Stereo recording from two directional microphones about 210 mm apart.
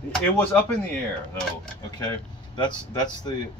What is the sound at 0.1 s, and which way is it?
Speech, 5° left (ahead or behind).